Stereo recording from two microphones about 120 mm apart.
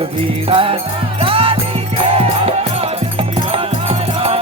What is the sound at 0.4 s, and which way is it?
Music, 50° right (ahead or behind).